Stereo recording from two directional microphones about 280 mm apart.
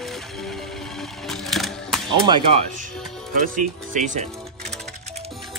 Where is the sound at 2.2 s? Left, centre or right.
Centre.